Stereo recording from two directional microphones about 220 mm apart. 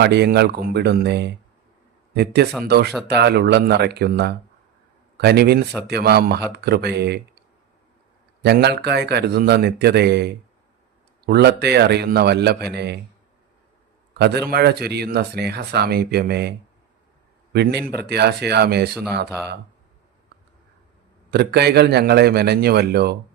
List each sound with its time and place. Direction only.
0.0 s speech: 50° right (ahead or behind)
8.4 s speech: 50° right (ahead or behind)
14.1 s speech: 50° right (ahead or behind)
21.2 s speech: 50° right (ahead or behind)